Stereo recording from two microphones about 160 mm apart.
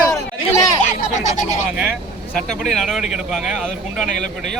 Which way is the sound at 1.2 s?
50° left (ahead or behind).